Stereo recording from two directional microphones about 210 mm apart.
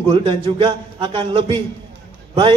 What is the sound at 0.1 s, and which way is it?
A man's voice, 25° right (ahead or behind).